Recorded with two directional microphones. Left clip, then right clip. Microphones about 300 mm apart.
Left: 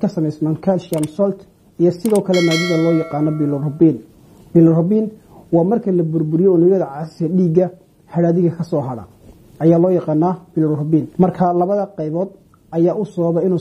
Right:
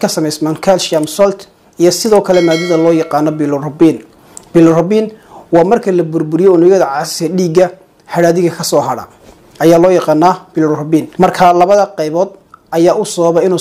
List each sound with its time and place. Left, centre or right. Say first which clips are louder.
0.0 s speech: right 7 dB; centre
2.3 s speech: right 6 dB; centre
3.2 s speech: right 7 dB; centre